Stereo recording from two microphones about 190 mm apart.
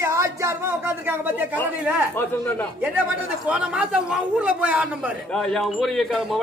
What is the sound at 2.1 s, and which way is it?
Speech, 10° left (ahead or behind).